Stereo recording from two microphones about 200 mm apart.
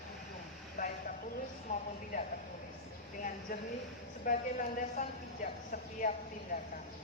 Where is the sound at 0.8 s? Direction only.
40° left (ahead or behind).